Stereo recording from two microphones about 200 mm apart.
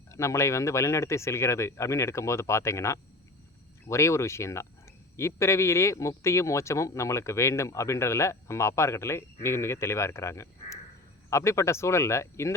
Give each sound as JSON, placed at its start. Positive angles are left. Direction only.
{"t": 0.1, "sound": "speech", "side_deg": 15}